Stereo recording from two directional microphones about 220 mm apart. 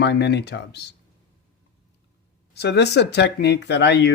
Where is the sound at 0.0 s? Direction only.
50° left (ahead or behind).